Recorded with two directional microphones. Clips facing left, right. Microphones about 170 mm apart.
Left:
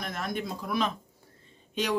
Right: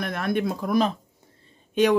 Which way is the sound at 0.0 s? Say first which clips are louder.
Right 8 dB; 65° right (ahead or behind).